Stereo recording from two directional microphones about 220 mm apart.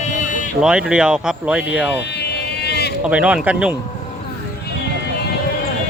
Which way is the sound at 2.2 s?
50° left (ahead or behind).